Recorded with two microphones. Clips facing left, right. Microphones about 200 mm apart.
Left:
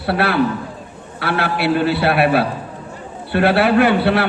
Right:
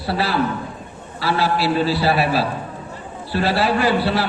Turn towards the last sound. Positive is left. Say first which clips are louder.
# left 4 dB
turn(degrees=60)  # may be behind; listen again after turning